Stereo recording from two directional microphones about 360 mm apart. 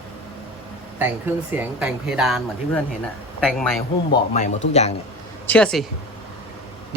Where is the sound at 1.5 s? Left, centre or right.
Centre.